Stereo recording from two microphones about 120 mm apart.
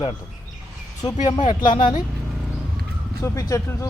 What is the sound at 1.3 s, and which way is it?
Speech, 40° left (ahead or behind).